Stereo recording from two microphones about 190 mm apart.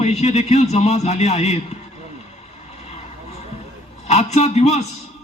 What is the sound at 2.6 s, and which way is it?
Vehicle, 35° left (ahead or behind).